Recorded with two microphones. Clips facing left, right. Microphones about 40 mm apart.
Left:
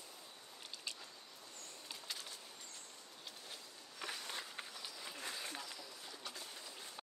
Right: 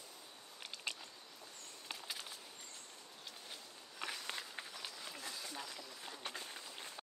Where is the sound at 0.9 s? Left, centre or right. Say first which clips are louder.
Right 5 dB; right.